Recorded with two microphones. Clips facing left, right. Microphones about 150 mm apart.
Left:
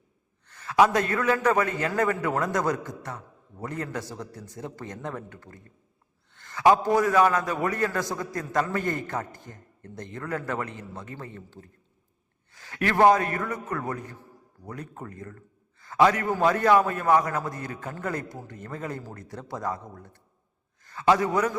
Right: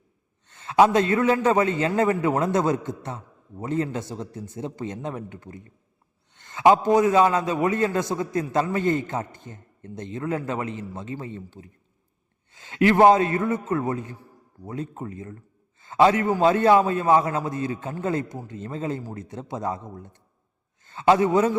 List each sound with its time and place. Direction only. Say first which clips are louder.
0.4 s a man's voice: right 3 dB; 25° right (ahead or behind)